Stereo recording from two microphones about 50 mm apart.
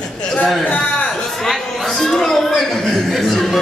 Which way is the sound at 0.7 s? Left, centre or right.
Left.